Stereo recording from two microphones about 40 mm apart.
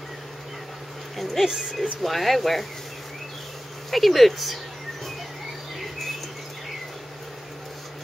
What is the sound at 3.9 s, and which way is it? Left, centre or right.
Speech, centre.